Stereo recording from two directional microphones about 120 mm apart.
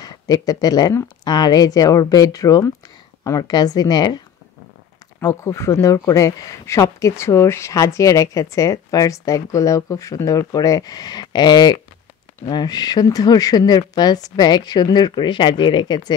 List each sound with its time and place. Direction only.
0.0 s speech: 30° left (ahead or behind)
5.2 s speech: 25° left (ahead or behind)